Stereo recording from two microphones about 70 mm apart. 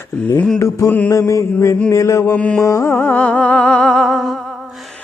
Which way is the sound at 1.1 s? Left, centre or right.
Left.